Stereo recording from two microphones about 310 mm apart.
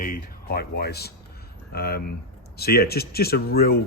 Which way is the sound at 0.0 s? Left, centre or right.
Left.